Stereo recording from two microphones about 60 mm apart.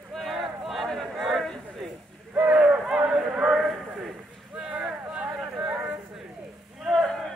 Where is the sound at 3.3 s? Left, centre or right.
Centre.